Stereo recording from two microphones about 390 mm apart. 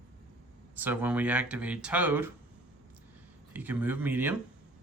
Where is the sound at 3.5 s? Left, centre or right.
Centre.